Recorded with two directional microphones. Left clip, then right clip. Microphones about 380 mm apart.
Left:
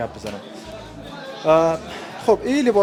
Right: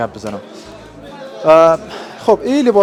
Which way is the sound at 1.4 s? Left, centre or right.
Centre.